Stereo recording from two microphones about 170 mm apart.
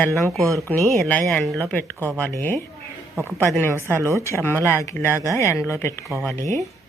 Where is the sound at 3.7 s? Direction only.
15° right (ahead or behind).